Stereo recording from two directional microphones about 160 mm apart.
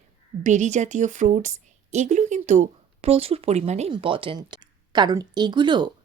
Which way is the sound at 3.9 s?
35° right (ahead or behind).